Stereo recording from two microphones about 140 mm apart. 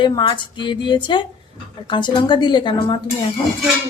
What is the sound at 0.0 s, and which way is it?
A woman's voice, 35° left (ahead or behind).